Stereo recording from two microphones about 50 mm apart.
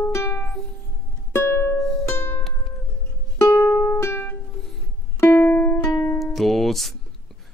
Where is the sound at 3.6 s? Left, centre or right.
Left.